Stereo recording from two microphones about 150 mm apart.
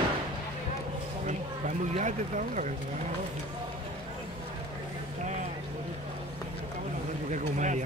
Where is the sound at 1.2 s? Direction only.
50° right (ahead or behind).